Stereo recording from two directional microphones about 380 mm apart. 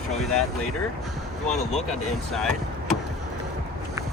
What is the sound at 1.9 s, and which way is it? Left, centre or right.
Speech, centre.